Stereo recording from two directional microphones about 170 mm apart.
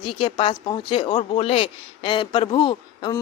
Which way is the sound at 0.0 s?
30° left (ahead or behind).